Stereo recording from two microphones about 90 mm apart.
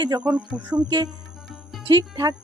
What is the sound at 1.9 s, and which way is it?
Speech, 50° right (ahead or behind).